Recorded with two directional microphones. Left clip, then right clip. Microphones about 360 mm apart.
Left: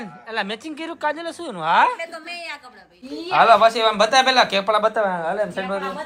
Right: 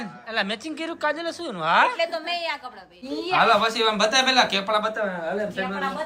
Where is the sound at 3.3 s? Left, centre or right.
Centre.